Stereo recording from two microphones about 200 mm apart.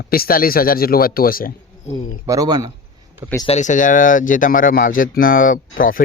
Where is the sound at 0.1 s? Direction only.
45° left (ahead or behind).